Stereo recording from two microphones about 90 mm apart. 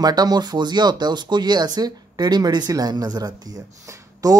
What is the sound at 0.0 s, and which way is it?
Speech, 50° right (ahead or behind).